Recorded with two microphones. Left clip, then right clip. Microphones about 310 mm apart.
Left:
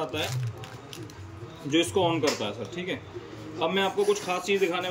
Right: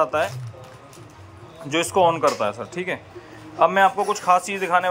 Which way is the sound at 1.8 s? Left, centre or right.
Right.